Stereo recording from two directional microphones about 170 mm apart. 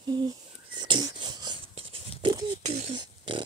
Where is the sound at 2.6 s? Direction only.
40° right (ahead or behind).